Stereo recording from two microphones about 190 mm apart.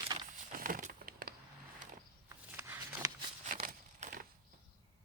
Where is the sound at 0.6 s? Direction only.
45° right (ahead or behind).